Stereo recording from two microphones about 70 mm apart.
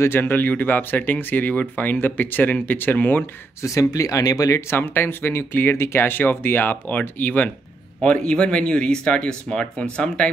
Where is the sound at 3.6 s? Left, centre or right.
Left.